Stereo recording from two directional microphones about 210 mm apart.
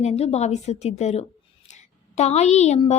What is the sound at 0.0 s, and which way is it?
A woman's voice, 30° left (ahead or behind).